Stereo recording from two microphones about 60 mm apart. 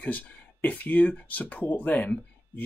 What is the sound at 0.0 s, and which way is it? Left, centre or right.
Speech, left.